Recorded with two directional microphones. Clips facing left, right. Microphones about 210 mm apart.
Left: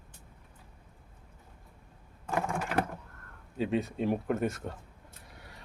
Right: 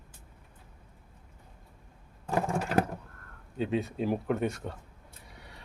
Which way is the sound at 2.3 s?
35° right (ahead or behind).